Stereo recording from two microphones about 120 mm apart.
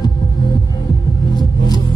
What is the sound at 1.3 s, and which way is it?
Music, 35° left (ahead or behind).